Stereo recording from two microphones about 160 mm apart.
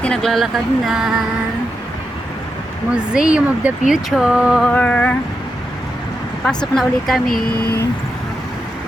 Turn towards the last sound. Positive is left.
turn(degrees=75)  # may be behind; listen again after turning